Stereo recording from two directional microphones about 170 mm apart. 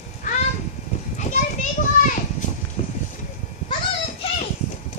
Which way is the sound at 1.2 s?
45° left (ahead or behind).